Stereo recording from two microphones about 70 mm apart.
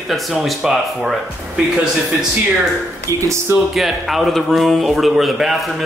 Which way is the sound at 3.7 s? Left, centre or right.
Centre.